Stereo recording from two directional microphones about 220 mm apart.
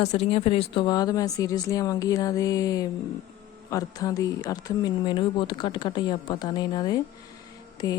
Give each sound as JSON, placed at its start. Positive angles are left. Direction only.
{"t": 0.0, "sound": "speech", "side_deg": 30}